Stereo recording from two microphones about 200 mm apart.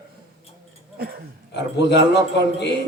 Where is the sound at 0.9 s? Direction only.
50° right (ahead or behind).